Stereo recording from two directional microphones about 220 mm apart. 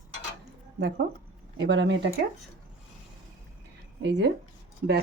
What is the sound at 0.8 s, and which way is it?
Speech, 50° right (ahead or behind).